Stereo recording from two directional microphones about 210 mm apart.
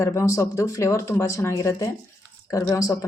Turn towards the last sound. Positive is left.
turn(degrees=15)  # may be behind; listen again after turning